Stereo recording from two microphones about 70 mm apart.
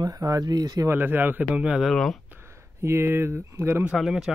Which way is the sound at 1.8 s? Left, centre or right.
Centre.